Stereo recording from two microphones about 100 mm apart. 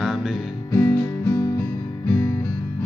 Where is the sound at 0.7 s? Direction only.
30° left (ahead or behind).